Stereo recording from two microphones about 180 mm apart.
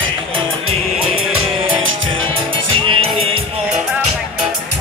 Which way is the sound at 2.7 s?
30° right (ahead or behind).